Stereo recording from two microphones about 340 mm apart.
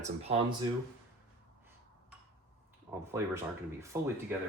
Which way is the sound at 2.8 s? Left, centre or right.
Centre.